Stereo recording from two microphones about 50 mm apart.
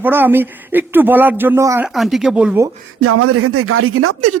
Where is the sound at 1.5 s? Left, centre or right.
Right.